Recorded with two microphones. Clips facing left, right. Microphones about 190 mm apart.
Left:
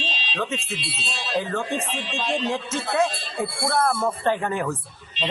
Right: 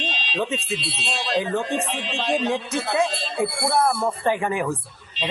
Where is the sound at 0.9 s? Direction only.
60° right (ahead or behind).